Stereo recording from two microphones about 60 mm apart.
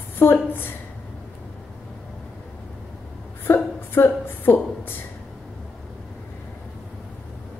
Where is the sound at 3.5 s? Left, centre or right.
Left.